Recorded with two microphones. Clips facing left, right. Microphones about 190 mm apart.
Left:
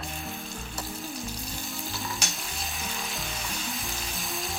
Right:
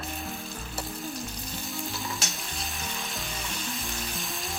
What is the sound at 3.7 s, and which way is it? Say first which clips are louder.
Frying: right 1 dB; centre (ahead or behind).